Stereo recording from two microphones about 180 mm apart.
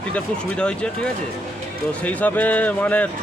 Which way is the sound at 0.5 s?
5° left (ahead or behind).